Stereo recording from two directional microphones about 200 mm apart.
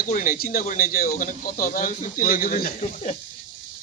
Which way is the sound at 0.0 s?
45° left (ahead or behind).